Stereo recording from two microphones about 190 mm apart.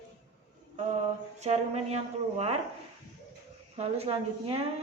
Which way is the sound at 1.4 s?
35° right (ahead or behind).